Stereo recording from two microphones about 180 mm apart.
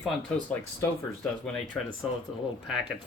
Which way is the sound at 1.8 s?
5° left (ahead or behind).